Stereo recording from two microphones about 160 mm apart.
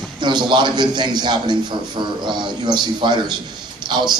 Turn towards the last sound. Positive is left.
turn(degrees=-30)  # may be behind; listen again after turning